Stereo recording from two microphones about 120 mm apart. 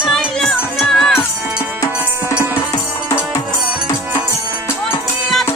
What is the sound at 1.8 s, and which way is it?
Music, 25° left (ahead or behind).